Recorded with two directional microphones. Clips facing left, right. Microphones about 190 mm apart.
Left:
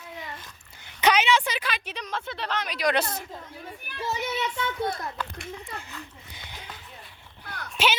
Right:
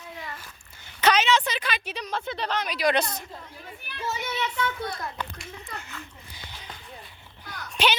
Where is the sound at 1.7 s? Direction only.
5° right (ahead or behind).